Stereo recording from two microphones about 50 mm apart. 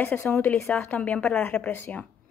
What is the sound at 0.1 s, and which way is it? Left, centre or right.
A woman's voice, left.